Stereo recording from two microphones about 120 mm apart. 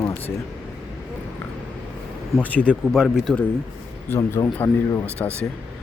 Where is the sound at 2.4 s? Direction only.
10° left (ahead or behind).